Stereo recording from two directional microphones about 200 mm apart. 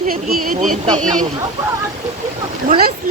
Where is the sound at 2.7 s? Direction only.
50° right (ahead or behind).